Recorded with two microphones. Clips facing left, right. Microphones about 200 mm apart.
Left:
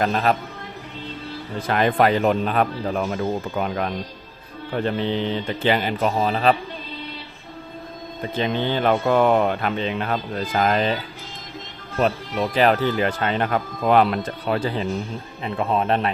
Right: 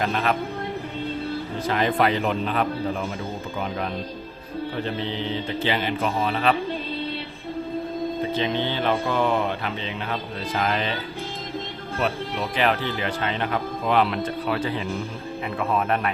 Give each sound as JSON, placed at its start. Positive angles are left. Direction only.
{"t": 0.0, "sound": "speech", "side_deg": 35}
{"t": 1.6, "sound": "speech", "side_deg": 55}
{"t": 5.6, "sound": "speech", "side_deg": 45}
{"t": 6.1, "sound": "speech", "side_deg": 35}
{"t": 8.4, "sound": "speech", "side_deg": 45}
{"t": 12.0, "sound": "speech", "side_deg": 40}